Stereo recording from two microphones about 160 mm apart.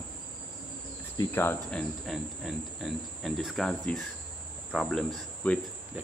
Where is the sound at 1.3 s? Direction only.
15° left (ahead or behind).